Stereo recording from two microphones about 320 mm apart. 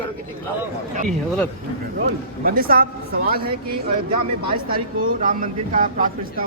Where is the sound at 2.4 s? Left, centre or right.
Right.